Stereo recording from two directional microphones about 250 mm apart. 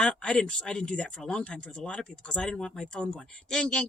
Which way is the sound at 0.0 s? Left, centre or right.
Centre.